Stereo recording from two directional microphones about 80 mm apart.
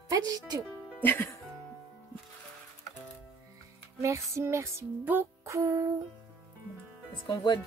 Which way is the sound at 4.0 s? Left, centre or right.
Right.